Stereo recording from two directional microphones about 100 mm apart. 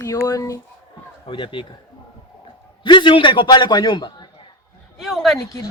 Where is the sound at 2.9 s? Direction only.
55° left (ahead or behind).